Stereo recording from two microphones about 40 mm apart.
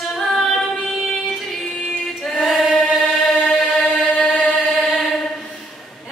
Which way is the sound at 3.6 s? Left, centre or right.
Centre.